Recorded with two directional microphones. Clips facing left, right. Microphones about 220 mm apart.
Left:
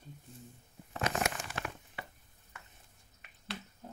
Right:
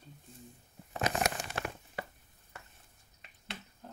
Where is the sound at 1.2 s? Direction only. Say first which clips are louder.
Right 2 dB; 40° right (ahead or behind).